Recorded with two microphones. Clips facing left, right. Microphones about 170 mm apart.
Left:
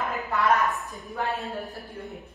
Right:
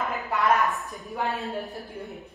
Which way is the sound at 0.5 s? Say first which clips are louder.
Right 1 dB; centre (ahead or behind).